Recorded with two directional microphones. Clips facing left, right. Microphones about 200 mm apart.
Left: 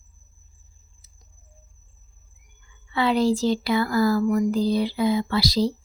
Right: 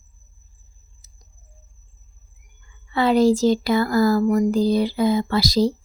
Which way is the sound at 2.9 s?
45° right (ahead or behind).